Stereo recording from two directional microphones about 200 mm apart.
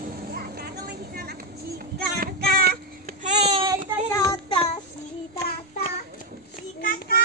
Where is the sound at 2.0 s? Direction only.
50° right (ahead or behind); by 3.6 s 35° right (ahead or behind).